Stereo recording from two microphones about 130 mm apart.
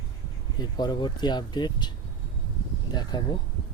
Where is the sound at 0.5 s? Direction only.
35° left (ahead or behind).